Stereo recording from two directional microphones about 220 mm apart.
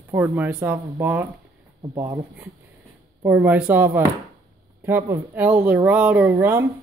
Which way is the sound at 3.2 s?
5° right (ahead or behind).